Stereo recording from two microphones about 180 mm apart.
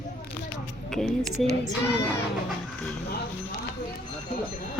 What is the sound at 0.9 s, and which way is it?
Speech, centre (ahead or behind).